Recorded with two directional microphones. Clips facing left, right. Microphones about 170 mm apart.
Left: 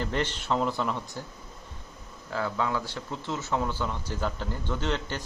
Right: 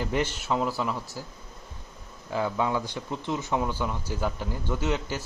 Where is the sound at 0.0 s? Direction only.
10° right (ahead or behind).